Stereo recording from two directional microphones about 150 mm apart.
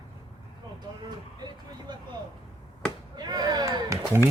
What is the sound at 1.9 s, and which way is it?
Speech, 30° right (ahead or behind).